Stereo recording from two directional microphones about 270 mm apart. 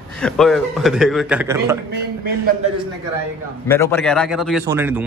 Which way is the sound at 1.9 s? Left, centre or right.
Right.